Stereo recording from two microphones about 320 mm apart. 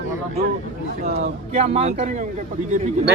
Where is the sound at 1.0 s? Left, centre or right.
Right.